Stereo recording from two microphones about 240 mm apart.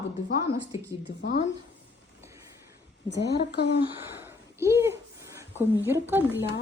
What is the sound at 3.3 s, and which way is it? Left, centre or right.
Speech, left.